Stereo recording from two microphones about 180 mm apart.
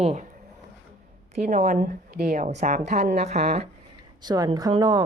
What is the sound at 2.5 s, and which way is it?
Speech, 40° right (ahead or behind).